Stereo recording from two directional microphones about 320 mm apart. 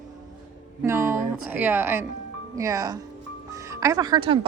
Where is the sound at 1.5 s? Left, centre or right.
Centre.